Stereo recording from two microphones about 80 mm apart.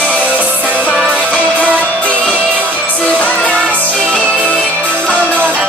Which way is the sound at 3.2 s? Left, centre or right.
Centre.